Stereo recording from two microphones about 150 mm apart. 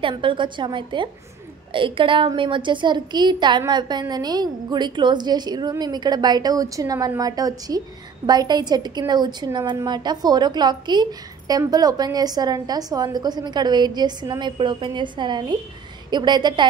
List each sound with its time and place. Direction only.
0.0 s a woman's voice: 35° right (ahead or behind)